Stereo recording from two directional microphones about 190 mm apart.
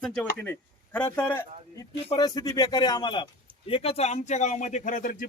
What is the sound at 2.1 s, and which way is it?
Speech, 20° left (ahead or behind).